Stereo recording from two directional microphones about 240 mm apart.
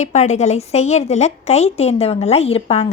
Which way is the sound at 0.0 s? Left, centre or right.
Left.